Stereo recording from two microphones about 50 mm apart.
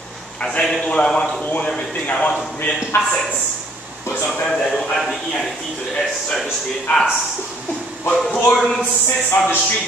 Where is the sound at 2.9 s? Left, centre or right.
Left.